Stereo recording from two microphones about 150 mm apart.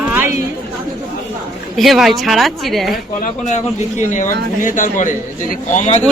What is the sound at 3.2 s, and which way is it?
A man's voice, 50° left (ahead or behind).